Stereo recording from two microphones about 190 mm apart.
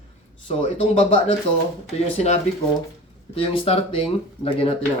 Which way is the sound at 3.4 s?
30° left (ahead or behind).